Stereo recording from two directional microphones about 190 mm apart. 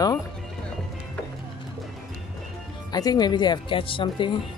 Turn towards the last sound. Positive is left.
turn(degrees=25)  # may be behind; listen again after turning